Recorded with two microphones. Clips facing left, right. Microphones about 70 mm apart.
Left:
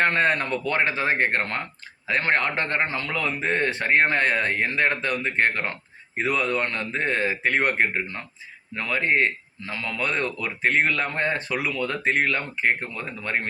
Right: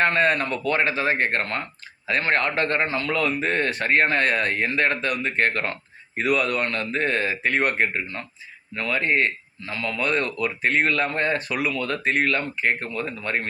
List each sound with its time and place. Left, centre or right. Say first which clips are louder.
0.0 s a man's voice: right 1 dB; left